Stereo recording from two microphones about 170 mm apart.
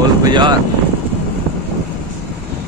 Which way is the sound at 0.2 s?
25° right (ahead or behind).